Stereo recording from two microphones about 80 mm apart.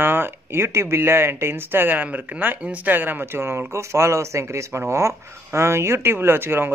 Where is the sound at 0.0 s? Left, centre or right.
Right.